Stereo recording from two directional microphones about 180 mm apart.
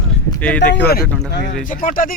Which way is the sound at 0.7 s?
65° left (ahead or behind).